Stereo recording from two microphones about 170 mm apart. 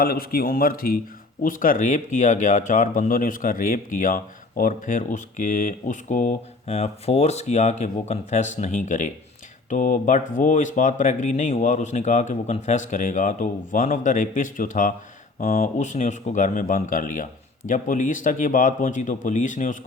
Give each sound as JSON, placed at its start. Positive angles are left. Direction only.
{"t": 0.0, "sound": "a man's voice", "side_deg": 60}